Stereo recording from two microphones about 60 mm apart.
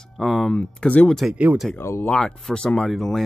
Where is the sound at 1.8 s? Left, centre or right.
Left.